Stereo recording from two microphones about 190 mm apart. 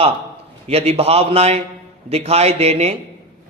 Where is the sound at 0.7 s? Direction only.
30° right (ahead or behind).